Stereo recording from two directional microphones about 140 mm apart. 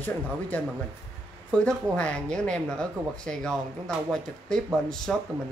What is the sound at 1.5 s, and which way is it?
Speech, 5° left (ahead or behind).